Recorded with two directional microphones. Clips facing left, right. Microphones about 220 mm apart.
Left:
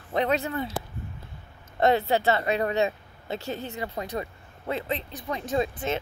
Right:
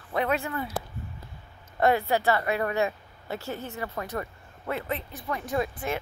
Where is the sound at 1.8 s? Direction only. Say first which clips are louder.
Left 1 dB; 20° left (ahead or behind).